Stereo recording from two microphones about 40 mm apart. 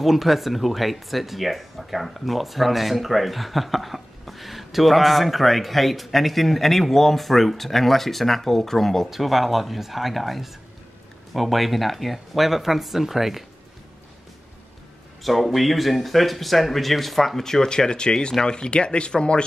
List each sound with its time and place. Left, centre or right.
0.0 s speech: centre
9.1 s speech: centre
15.2 s speech: centre; by 19.4 s left